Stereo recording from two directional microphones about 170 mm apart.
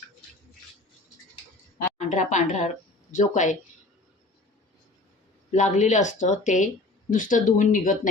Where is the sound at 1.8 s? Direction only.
45° left (ahead or behind).